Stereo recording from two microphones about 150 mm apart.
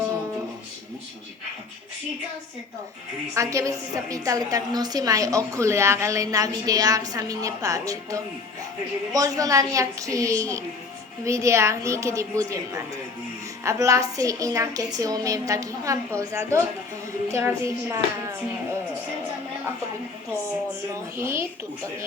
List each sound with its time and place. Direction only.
3.3 s a woman's voice: 20° right (ahead or behind)
21.2 s a woman's voice: 15° right (ahead or behind)